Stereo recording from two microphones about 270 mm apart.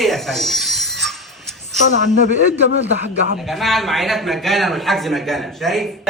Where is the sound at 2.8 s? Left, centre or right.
Right.